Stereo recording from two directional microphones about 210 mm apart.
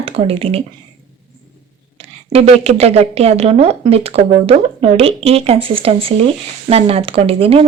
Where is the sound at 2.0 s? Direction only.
30° right (ahead or behind).